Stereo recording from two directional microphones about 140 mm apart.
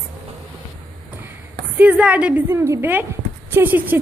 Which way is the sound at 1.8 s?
10° right (ahead or behind).